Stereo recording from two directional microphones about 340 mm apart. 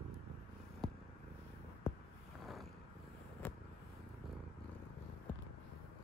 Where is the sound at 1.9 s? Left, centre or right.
Centre.